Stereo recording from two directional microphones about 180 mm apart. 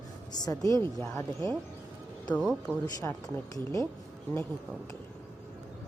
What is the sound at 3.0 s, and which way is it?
Speech, 15° left (ahead or behind).